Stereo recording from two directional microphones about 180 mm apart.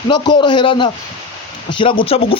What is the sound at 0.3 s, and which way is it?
Speech, 25° left (ahead or behind).